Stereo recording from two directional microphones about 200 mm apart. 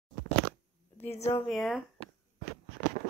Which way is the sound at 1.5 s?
Centre (ahead or behind).